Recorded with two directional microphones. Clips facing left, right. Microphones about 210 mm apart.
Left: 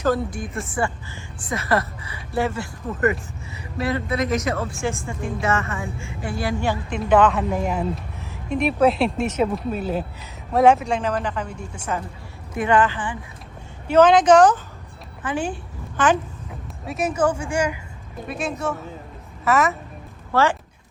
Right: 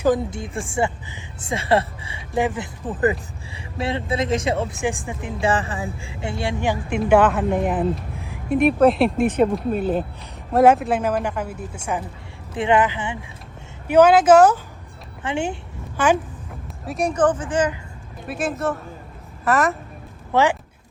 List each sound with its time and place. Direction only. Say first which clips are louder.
0.3 s speech: right 1 dB; 25° right (ahead or behind)
2.3 s a woman's voice: right 1 dB; 15° right (ahead or behind)
2.8 s speech: right 1 dB; 30° right (ahead or behind); by 5.3 s 15° right (ahead or behind)
5.4 s speech: right 3 dB; 30° right (ahead or behind); by 8.0 s centre (ahead or behind)
8.2 s a sound: right 4 dB; 15° right (ahead or behind)
8.5 s a woman's voice: right 3 dB; centre (ahead or behind)
15.2 s speech: right 1 dB; 25° right (ahead or behind)
16.0 s a woman's voice: right 1 dB; 10° right (ahead or behind); by 17.7 s 10° left (ahead or behind)
18.3 s speech: right 2 dB; centre (ahead or behind)
20.3 s a woman's voice: right 1 dB; 15° right (ahead or behind)